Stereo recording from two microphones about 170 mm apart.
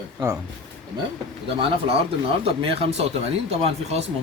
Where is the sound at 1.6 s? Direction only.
35° right (ahead or behind).